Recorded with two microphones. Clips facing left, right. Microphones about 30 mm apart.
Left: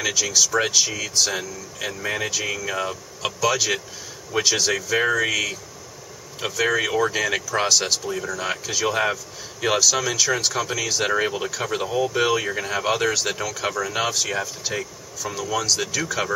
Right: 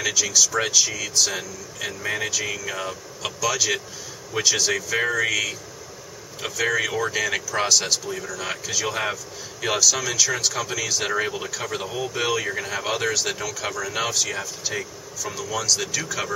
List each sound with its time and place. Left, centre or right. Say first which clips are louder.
0.2 s speech: left 1 dB; centre